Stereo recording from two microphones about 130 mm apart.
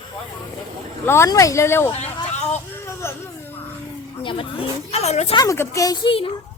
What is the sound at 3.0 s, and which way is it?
Baby cry, 20° left (ahead or behind).